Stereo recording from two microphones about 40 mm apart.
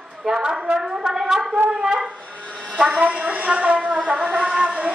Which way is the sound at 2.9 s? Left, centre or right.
Right.